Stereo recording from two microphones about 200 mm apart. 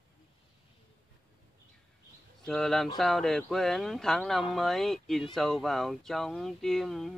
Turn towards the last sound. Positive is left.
turn(degrees=0)  # may be behind; listen again after turning